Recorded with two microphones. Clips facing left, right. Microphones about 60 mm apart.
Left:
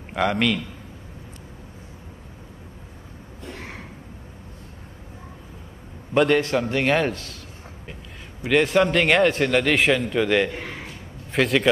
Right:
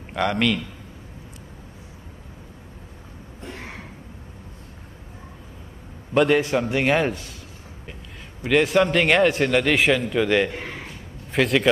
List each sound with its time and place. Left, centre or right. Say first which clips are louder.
0.1 s a man's voice: even; centre
6.1 s a man's voice: even; centre
8.4 s a man's voice: even; centre
10.5 s a man's voice: even; right
11.3 s a man's voice: even; centre